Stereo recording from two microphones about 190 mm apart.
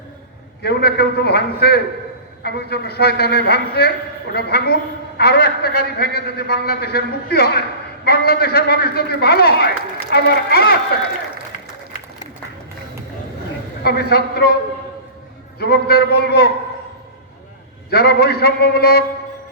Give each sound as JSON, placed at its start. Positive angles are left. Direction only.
{"t": 0.6, "sound": "a woman's voice", "side_deg": 55}
{"t": 13.8, "sound": "a woman's voice", "side_deg": 55}
{"t": 15.5, "sound": "a woman's voice", "side_deg": 55}
{"t": 17.9, "sound": "a woman's voice", "side_deg": 55}